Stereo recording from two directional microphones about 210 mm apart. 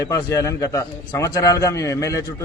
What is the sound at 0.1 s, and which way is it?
A man's voice, 15° left (ahead or behind).